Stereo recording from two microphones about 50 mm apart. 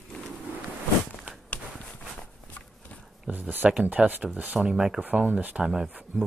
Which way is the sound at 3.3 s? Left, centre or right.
Right.